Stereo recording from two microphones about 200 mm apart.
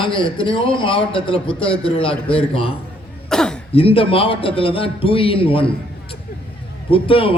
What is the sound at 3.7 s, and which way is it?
A man's voice, 30° left (ahead or behind).